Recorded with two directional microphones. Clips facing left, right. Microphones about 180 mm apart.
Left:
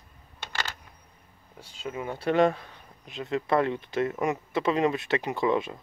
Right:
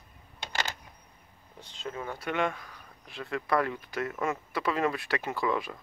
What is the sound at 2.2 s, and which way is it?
Speech, 35° left (ahead or behind).